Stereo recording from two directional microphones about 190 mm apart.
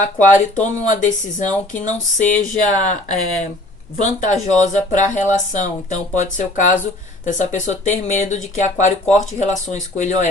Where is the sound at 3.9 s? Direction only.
40° left (ahead or behind).